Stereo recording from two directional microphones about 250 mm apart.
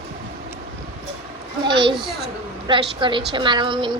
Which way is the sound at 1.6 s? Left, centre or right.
Centre.